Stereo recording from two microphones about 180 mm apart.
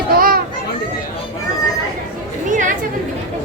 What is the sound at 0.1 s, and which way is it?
Children playing, 55° right (ahead or behind).